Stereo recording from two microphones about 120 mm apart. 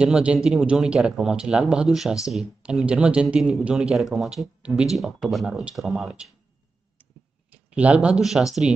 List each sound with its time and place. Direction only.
0.0 s speech: 10° right (ahead or behind)
7.5 s speech: 10° right (ahead or behind)